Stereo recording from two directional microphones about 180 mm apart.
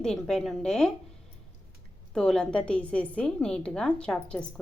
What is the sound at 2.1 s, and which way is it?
A woman's voice, 5° left (ahead or behind).